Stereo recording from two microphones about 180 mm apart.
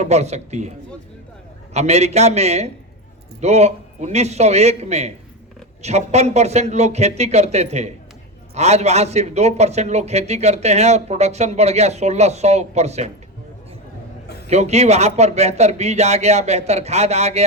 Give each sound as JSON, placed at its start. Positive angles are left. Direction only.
{"t": 0.0, "sound": "a man's voice", "side_deg": -40}
{"t": 1.7, "sound": "a man's voice", "side_deg": -40}
{"t": 14.4, "sound": "a man's voice", "side_deg": -40}